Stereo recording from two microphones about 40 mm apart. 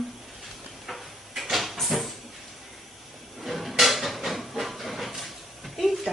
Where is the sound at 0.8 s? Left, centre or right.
Centre.